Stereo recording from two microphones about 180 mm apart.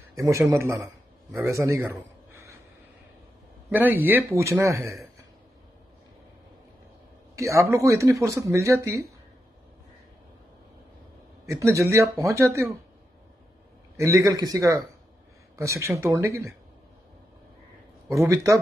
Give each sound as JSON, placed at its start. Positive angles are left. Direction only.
{"t": 0.1, "sound": "a man's voice", "side_deg": -15}
{"t": 3.7, "sound": "speech", "side_deg": -10}
{"t": 7.3, "sound": "speech", "side_deg": -15}
{"t": 11.4, "sound": "speech", "side_deg": -15}
{"t": 13.9, "sound": "speech", "side_deg": -15}
{"t": 18.0, "sound": "speech", "side_deg": -15}